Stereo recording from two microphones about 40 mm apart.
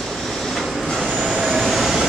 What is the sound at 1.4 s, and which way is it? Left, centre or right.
Vehicle, centre.